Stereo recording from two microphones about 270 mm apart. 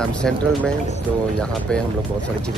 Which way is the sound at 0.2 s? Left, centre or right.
Centre.